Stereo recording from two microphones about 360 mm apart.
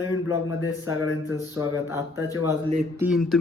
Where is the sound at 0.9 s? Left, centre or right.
Left.